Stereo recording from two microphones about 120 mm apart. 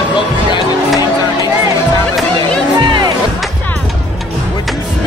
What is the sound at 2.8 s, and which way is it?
Music, 40° right (ahead or behind).